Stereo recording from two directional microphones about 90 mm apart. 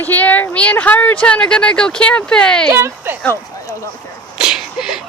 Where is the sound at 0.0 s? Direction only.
20° left (ahead or behind).